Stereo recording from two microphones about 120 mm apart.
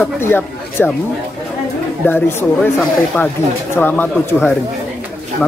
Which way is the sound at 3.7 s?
15° left (ahead or behind).